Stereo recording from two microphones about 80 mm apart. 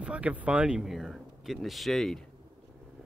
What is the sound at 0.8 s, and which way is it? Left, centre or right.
Speech, centre.